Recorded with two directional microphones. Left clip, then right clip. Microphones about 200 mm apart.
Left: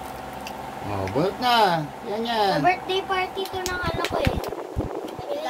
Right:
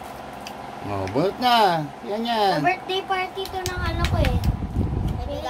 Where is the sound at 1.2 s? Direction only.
40° right (ahead or behind).